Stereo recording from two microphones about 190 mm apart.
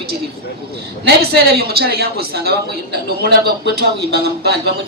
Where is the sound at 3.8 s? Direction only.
55° right (ahead or behind).